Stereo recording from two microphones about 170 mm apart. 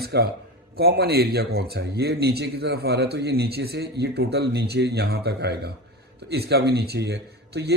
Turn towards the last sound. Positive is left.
turn(degrees=-75)  # may be behind; listen again after turning